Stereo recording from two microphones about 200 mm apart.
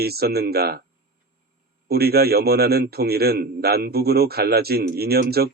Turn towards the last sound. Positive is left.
turn(degrees=-50)  # may be behind; listen again after turning